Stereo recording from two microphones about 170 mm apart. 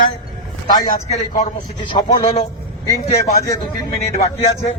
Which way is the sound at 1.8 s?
25° left (ahead or behind).